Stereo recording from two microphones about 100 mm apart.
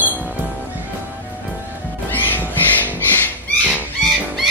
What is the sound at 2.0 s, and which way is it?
Music, 20° left (ahead or behind).